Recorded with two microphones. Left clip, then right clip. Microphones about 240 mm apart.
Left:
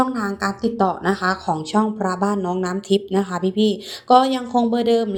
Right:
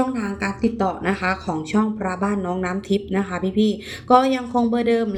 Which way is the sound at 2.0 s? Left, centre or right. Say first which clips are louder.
Left 3 dB; left.